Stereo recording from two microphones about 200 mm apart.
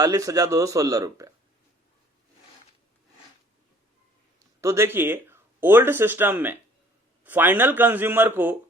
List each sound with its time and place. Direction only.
0.0 s speech: 15° right (ahead or behind)
4.6 s speech: 15° right (ahead or behind)